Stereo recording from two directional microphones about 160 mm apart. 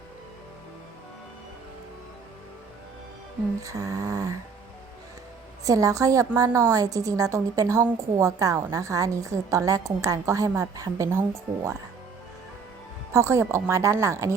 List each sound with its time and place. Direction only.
3.6 s a woman's voice: 20° right (ahead or behind)
5.6 s a woman's voice: 20° right (ahead or behind)
13.1 s speech: 15° right (ahead or behind)